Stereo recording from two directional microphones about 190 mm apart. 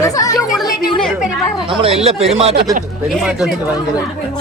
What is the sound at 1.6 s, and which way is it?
Speech, 30° right (ahead or behind).